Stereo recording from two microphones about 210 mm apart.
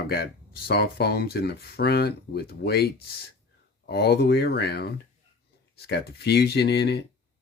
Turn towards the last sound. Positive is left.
turn(degrees=50)  # may be behind; listen again after turning